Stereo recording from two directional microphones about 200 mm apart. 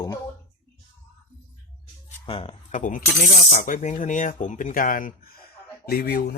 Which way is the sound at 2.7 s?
40° left (ahead or behind).